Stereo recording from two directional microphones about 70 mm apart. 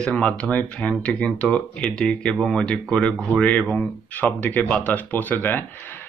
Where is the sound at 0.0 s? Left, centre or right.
Centre.